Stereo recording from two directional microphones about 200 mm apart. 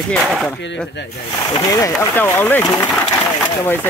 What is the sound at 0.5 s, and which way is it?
Speech, 60° left (ahead or behind).